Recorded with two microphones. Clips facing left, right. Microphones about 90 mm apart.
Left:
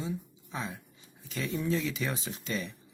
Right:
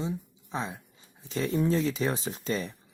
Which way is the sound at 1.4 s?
40° right (ahead or behind).